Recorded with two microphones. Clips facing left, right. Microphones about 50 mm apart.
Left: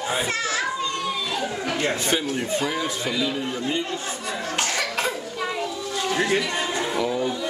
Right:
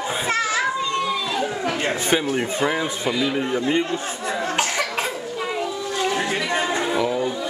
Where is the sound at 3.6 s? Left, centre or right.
Right.